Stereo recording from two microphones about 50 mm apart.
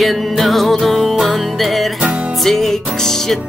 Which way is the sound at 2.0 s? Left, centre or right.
Right.